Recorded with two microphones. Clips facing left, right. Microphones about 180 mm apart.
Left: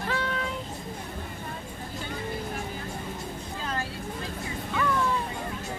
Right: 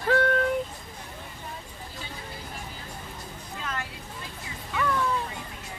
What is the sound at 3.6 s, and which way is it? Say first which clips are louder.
Vehicle: left 2 dB; 30° left (ahead or behind).